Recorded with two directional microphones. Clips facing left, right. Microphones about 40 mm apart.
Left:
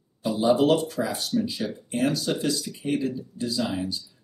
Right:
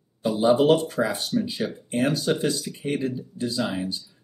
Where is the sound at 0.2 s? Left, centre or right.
Centre.